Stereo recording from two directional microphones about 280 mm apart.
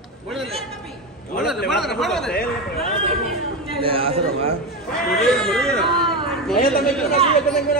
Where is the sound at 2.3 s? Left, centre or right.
Left.